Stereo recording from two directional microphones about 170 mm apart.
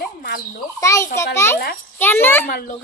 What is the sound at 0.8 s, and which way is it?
Speech, 15° left (ahead or behind).